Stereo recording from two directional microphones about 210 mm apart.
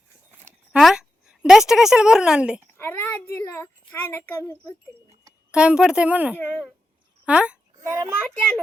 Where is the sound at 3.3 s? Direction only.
10° left (ahead or behind).